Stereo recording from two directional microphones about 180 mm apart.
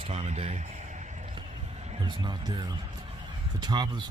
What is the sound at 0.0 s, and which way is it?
Speech, 35° right (ahead or behind).